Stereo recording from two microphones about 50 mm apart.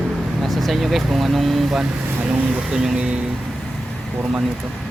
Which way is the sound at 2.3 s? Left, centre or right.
Centre.